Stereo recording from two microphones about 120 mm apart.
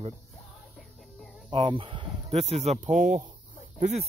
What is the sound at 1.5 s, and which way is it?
Speech, 40° right (ahead or behind).